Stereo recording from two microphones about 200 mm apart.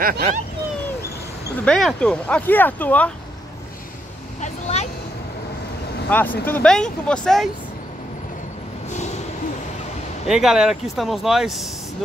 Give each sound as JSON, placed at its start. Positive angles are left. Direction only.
{"t": 0.0, "sound": "speech", "side_deg": -45}
{"t": 1.6, "sound": "speech", "side_deg": 5}
{"t": 4.4, "sound": "vehicle", "side_deg": 35}
{"t": 6.0, "sound": "speech", "side_deg": 10}
{"t": 10.2, "sound": "speech", "side_deg": -5}